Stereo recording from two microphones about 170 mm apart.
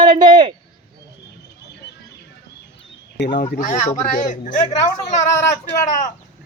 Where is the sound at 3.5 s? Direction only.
45° left (ahead or behind).